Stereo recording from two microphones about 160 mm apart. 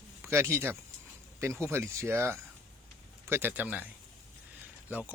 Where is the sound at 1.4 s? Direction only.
15° right (ahead or behind).